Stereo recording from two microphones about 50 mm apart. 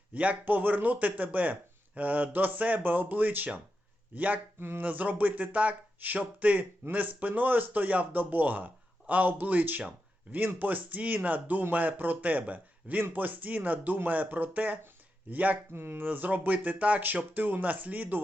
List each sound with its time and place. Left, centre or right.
0.1 s a man's voice: right
15.7 s speech: right
16.0 s a man's voice: right